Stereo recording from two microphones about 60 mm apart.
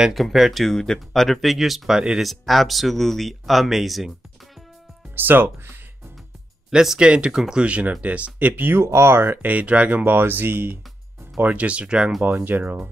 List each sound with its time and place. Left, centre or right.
0.1 s speech: centre
2.2 s speech: centre
5.1 s speech: right
6.7 s speech: centre
10.0 s speech: right
11.4 s speech: right
12.4 s speech: right